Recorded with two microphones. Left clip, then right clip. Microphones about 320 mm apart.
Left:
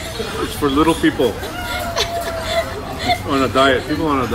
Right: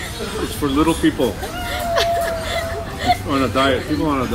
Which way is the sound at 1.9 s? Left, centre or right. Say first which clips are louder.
Right 6 dB; centre.